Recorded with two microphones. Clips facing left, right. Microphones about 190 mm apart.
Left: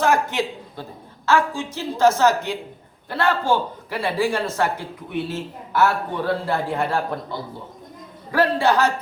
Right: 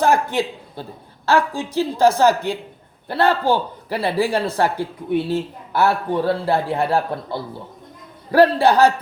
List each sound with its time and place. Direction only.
0.0 s a woman's voice: 35° right (ahead or behind)
8.3 s a man's voice: 35° right (ahead or behind)